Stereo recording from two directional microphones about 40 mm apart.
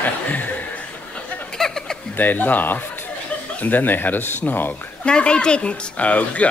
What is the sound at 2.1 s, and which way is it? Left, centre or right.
Speech, left.